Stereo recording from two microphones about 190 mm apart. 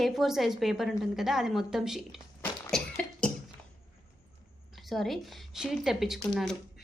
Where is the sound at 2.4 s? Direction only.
5° left (ahead or behind).